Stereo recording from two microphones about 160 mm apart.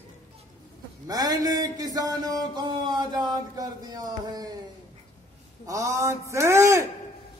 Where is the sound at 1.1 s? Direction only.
25° right (ahead or behind).